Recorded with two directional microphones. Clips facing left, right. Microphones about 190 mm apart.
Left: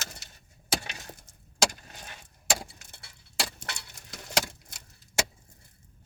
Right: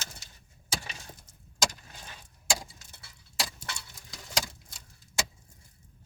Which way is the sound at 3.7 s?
65° left (ahead or behind).